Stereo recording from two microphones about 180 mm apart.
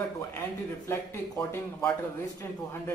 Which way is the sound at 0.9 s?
10° left (ahead or behind).